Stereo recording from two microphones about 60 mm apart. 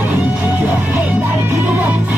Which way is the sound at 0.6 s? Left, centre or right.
Right.